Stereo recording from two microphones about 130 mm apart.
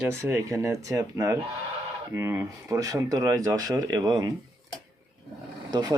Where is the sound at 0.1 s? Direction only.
20° right (ahead or behind).